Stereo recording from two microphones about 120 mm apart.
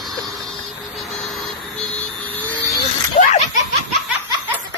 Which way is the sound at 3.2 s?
90° left.